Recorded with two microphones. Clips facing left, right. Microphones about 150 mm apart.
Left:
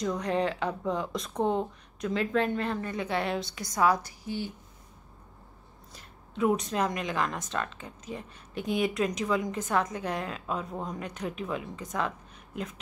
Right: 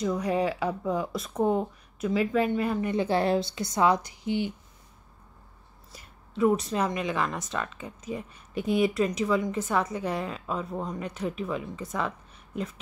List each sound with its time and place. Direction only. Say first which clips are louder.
0.0 s speech: right 2 dB; 5° right (ahead or behind)
2.9 s a woman's voice: right 6 dB; 30° right (ahead or behind)
5.9 s speech: right 3 dB; centre (ahead or behind)